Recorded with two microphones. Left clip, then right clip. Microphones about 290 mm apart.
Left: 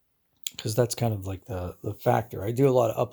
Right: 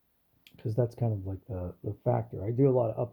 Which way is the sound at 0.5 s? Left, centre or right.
Centre.